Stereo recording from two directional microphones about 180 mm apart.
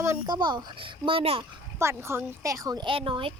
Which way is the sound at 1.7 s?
15° right (ahead or behind).